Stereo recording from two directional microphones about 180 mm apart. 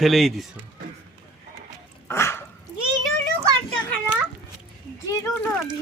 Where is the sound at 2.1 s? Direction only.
15° left (ahead or behind).